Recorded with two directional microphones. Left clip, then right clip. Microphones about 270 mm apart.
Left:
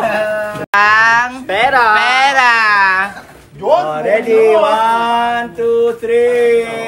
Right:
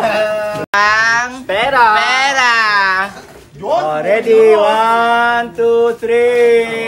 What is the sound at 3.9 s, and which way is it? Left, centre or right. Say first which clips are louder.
Male singing: right 1 dB; right.